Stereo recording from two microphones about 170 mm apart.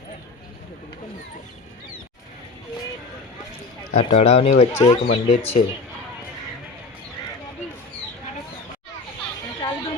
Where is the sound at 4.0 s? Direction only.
35° left (ahead or behind).